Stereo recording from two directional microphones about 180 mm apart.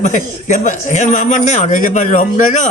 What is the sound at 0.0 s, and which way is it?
A man's voice, 45° left (ahead or behind).